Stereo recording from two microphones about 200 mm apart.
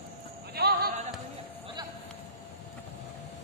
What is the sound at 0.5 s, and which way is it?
Music, 50° right (ahead or behind).